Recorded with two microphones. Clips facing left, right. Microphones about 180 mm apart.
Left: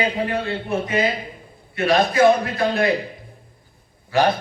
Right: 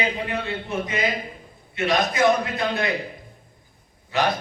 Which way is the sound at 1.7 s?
30° left (ahead or behind).